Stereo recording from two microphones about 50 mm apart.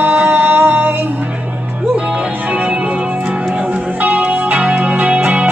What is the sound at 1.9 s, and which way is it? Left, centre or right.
Music, centre.